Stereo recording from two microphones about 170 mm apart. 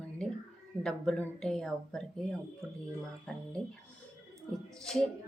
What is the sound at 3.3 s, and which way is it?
Speech, 5° left (ahead or behind).